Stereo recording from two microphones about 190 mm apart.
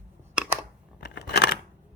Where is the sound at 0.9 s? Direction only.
60° left (ahead or behind).